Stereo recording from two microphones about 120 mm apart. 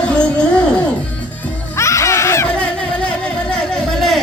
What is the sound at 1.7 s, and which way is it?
Baby cry, 25° left (ahead or behind).